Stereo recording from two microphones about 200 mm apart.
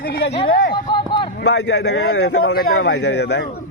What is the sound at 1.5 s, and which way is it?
A man's voice, 60° left (ahead or behind).